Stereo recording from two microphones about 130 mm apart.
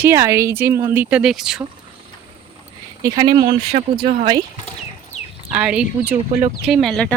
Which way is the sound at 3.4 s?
75° right (ahead or behind).